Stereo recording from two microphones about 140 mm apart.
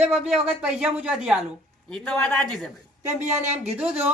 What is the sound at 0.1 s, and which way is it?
Speech, centre (ahead or behind).